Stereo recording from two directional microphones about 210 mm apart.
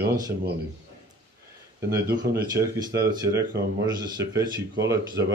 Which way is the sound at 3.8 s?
20° right (ahead or behind).